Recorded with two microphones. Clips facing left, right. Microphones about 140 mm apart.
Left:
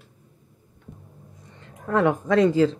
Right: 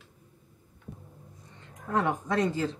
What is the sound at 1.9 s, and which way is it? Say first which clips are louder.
Speech: left 7 dB; 90° left.